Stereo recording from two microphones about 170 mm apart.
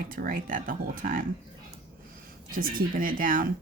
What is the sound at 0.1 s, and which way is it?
Speech, 55° right (ahead or behind).